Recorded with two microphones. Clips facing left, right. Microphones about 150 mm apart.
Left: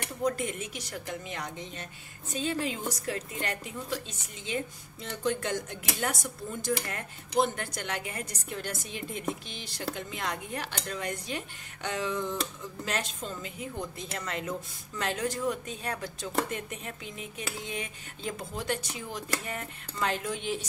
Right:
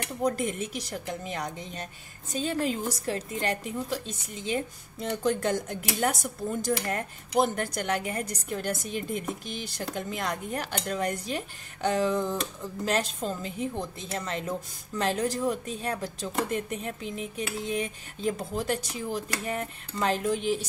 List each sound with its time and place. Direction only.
0.2 s a woman's voice: 35° right (ahead or behind)